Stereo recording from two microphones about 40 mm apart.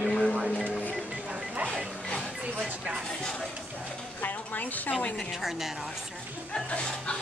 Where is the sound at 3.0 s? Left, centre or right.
Centre.